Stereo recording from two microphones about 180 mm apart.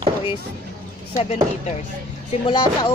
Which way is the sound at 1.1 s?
40° left (ahead or behind).